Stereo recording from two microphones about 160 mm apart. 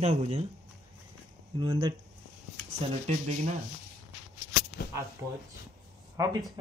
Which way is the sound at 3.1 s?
45° right (ahead or behind).